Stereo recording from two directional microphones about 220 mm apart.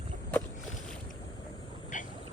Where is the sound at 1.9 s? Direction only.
35° left (ahead or behind).